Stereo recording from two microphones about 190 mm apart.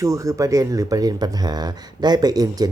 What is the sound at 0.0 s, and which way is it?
Speech, 15° right (ahead or behind).